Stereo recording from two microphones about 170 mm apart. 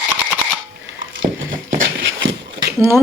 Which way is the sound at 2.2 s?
90° right.